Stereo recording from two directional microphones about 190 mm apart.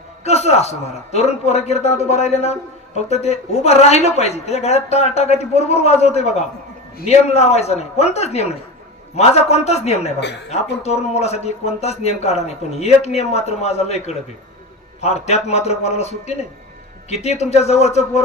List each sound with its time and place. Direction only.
0.2 s speech: 35° left (ahead or behind)